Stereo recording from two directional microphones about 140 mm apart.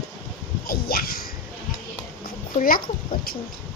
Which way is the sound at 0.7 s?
90° left.